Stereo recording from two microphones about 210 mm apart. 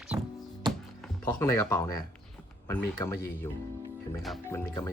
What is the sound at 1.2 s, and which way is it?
Speech, 15° left (ahead or behind).